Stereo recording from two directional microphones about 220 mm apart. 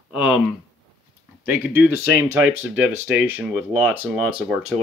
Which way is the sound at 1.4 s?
10° right (ahead or behind).